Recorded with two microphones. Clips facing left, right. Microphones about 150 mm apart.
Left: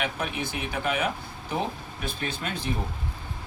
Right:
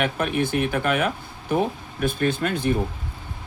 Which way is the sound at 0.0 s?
55° right (ahead or behind).